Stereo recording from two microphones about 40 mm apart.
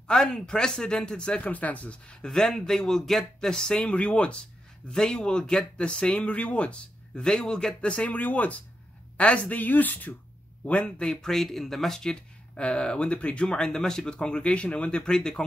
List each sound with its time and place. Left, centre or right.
0.1 s speech: centre
1.5 s speech: left
2.3 s a man's voice: centre
3.9 s speech: left
7.2 s speech: left
8.1 s speech: left
9.1 s speech: left
10.6 s speech: left
11.1 s speech: centre
12.5 s a man's voice: left